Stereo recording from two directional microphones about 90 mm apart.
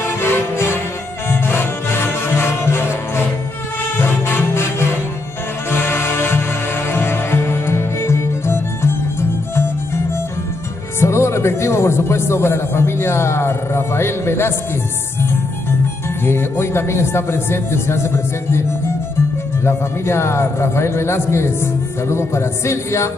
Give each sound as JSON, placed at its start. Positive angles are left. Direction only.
{"t": 0.0, "sound": "music", "side_deg": 25}
{"t": 11.0, "sound": "speech", "side_deg": 30}
{"t": 16.3, "sound": "speech", "side_deg": 30}
{"t": 19.6, "sound": "speech", "side_deg": 30}